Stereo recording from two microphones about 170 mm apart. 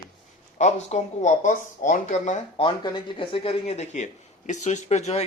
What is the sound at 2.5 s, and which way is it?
Speech, 25° left (ahead or behind).